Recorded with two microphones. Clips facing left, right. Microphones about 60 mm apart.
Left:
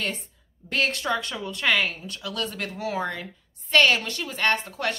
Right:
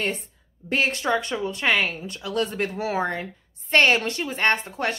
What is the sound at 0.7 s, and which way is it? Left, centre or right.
A woman's voice, right.